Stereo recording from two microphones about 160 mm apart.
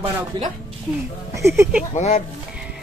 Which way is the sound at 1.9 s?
45° left (ahead or behind).